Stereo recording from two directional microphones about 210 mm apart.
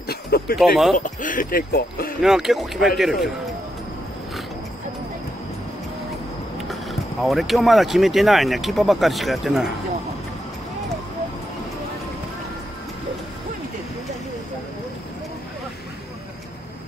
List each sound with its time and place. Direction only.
0.1 s a sound: 50° left (ahead or behind)
0.6 s speech: centre (ahead or behind)
0.9 s speech: 40° left (ahead or behind)
2.2 s speech: centre (ahead or behind)
6.7 s speech: centre (ahead or behind)